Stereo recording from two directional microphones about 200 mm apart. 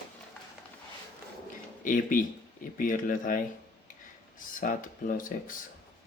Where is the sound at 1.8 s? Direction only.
45° left (ahead or behind).